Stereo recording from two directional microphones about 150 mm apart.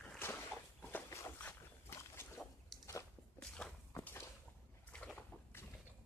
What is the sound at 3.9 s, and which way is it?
Walk, 15° left (ahead or behind).